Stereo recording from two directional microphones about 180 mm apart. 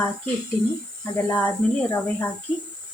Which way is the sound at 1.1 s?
10° left (ahead or behind).